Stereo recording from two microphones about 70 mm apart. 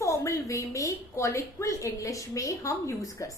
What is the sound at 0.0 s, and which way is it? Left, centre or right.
A woman's voice, left.